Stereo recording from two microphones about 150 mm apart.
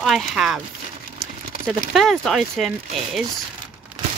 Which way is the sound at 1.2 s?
5° left (ahead or behind).